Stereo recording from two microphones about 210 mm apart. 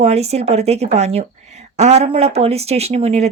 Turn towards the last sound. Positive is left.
turn(degrees=-30)  # may be behind; listen again after turning